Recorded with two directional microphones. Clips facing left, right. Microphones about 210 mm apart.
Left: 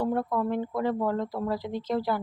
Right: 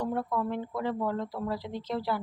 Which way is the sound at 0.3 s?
50° left (ahead or behind).